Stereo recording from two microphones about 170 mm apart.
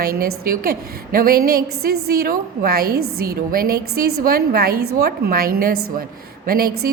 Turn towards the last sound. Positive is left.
turn(degrees=-65)  # may be behind; listen again after turning